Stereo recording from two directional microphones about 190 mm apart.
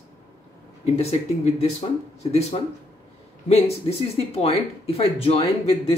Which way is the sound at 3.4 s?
30° left (ahead or behind).